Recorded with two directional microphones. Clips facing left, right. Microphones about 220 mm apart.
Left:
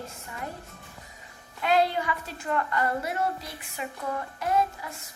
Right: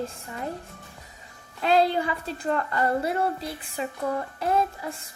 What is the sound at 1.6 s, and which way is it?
A woman's voice, 30° right (ahead or behind).